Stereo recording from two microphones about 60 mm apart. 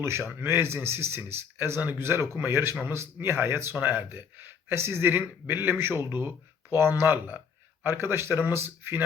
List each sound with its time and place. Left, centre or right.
0.3 s speech: right